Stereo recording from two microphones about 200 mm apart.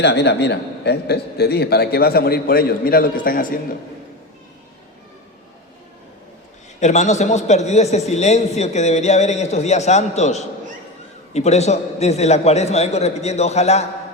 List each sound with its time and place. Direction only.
0.0 s a man's voice: 55° left (ahead or behind)
6.7 s a man's voice: 35° left (ahead or behind)